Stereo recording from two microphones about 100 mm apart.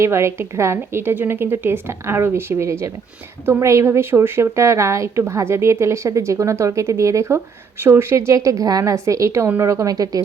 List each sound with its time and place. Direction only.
0.0 s a woman's voice: 25° right (ahead or behind)